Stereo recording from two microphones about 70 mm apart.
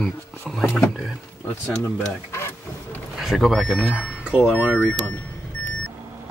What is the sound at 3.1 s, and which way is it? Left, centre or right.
Speech, centre.